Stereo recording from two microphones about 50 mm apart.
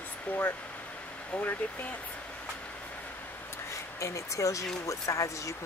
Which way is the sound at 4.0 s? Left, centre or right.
Left.